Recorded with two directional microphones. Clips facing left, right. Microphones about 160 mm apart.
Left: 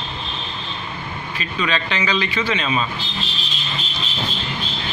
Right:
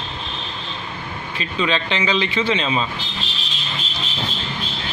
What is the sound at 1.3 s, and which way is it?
A man's voice, 25° right (ahead or behind).